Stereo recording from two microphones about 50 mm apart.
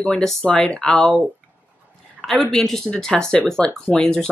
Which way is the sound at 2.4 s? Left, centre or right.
Centre.